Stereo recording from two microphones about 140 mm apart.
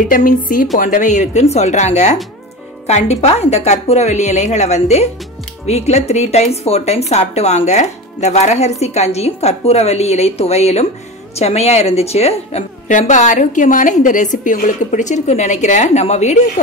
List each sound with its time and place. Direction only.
0.1 s a woman's voice: 75° left (ahead or behind); by 16.6 s 55° left (ahead or behind)